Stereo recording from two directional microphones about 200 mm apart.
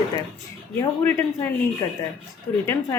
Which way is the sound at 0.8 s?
10° left (ahead or behind).